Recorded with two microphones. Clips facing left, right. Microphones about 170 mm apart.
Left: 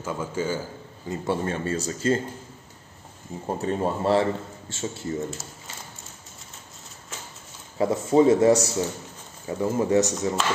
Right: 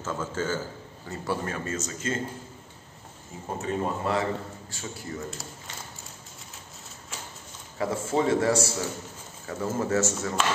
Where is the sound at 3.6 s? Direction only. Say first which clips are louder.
Left 3 dB; 30° left (ahead or behind).